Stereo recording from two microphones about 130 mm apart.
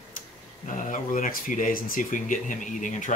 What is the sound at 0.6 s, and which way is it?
Speech, 85° left.